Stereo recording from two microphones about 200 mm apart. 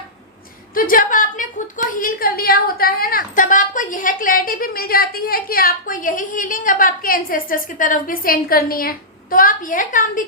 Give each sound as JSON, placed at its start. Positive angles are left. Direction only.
{"t": 0.7, "sound": "a woman's voice", "side_deg": 45}